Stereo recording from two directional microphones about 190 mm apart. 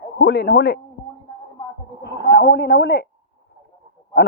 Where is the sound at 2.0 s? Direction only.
65° left (ahead or behind).